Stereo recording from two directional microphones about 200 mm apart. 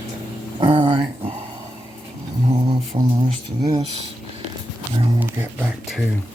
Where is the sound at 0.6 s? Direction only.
25° right (ahead or behind).